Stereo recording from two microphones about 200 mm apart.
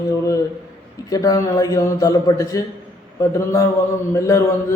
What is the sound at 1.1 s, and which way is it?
A man's voice, 20° left (ahead or behind).